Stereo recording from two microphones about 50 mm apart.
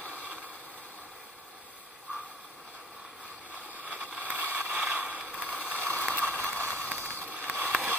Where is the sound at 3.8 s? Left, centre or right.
Right.